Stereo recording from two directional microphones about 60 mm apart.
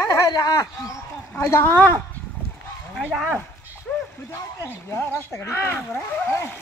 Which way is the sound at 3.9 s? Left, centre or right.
Centre.